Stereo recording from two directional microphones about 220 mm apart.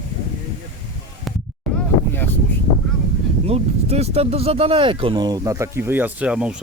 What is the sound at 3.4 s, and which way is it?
Speech, 30° right (ahead or behind).